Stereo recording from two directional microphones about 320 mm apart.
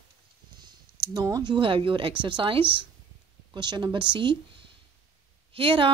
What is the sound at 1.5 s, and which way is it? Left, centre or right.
A woman's voice, centre.